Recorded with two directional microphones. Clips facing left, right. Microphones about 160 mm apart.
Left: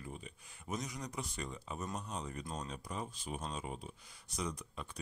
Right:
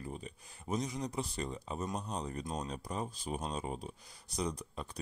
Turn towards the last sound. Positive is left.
turn(degrees=-35)  # may be behind; listen again after turning